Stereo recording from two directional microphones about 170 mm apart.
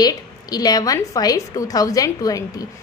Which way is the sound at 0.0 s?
25° left (ahead or behind).